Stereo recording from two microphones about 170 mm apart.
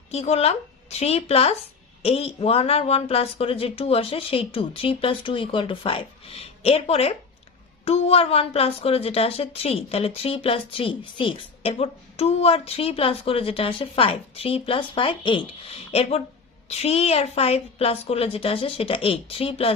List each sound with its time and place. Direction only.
0.1 s a woman's voice: 40° left (ahead or behind)